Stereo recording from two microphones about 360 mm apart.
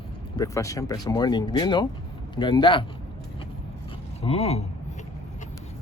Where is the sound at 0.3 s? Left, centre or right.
Centre.